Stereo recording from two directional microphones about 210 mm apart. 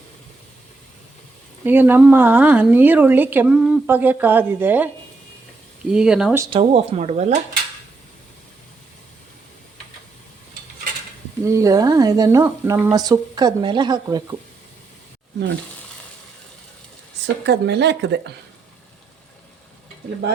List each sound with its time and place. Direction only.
1.6 s speech: 10° right (ahead or behind)
5.9 s speech: 5° right (ahead or behind)
6.4 s speech: 25° right (ahead or behind)
11.4 s speech: 15° right (ahead or behind)
17.2 s speech: 55° right (ahead or behind)